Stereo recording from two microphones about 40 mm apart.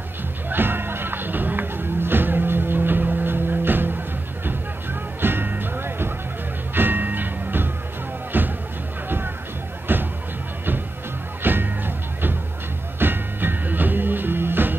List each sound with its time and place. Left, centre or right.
0.5 s music: right
5.2 s music: right
6.7 s music: right
9.9 s music: right
11.4 s music: right